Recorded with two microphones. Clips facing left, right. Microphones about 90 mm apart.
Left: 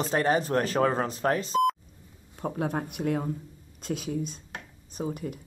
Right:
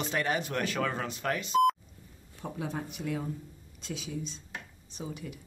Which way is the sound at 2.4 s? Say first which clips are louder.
Left 6 dB; 50° left (ahead or behind).